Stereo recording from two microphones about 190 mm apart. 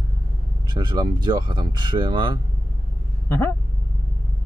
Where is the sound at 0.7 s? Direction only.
20° right (ahead or behind).